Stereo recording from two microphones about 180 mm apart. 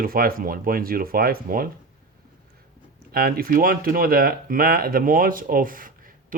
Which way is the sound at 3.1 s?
55° right (ahead or behind).